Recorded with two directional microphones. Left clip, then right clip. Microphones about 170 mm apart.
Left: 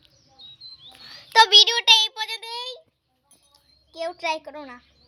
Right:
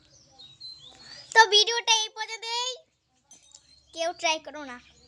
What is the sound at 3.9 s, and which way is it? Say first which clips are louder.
Speech: even; 15° right (ahead or behind).